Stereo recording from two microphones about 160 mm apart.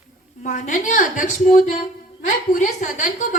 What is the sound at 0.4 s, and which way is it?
A woman's voice, 55° left (ahead or behind).